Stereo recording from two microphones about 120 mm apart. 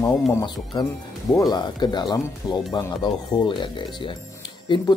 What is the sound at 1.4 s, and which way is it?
A man's voice, 35° left (ahead or behind).